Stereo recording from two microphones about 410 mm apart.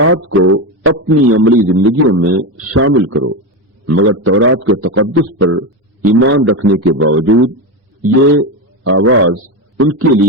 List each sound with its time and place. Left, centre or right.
0.0 s a man's voice: right